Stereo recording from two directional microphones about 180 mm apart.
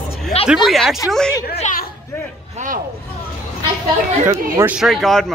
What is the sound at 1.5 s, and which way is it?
Chatter, 40° left (ahead or behind).